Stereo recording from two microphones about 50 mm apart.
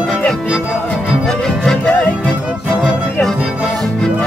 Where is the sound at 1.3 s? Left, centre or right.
Centre.